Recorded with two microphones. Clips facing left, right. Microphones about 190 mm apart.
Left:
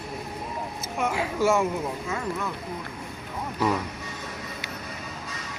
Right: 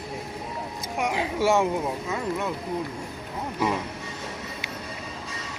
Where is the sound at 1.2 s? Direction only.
25° right (ahead or behind).